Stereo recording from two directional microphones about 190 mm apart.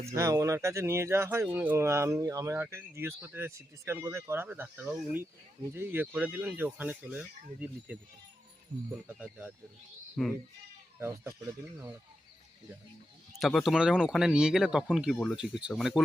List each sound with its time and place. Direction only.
0.0 s speech: 15° right (ahead or behind)
8.7 s speech: 45° right (ahead or behind)
9.0 s speech: 5° right (ahead or behind)
10.2 s speech: 5° left (ahead or behind)
11.0 s speech: 15° right (ahead or behind)
13.4 s speech: centre (ahead or behind)